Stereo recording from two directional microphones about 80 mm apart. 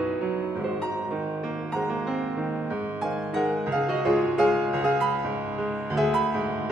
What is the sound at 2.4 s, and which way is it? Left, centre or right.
Music, centre.